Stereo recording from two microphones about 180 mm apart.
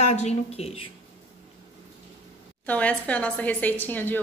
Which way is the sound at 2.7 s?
10° left (ahead or behind).